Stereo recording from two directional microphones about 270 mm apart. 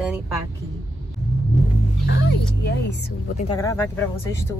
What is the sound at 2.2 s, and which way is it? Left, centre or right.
Speech, left.